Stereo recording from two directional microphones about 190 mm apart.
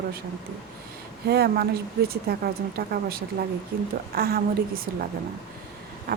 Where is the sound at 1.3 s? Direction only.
60° right (ahead or behind).